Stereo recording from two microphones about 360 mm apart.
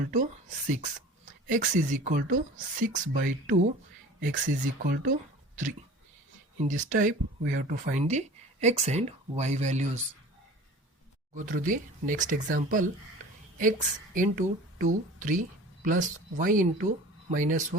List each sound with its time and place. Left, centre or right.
0.0 s speech: right
6.6 s speech: right
11.3 s speech: right